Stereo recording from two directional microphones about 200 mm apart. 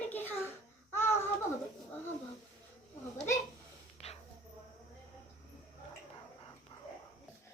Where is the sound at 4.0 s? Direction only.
30° left (ahead or behind).